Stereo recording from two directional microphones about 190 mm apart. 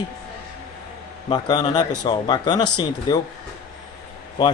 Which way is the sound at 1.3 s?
20° left (ahead or behind).